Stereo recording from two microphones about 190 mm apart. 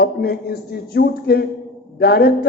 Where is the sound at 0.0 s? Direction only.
55° left (ahead or behind).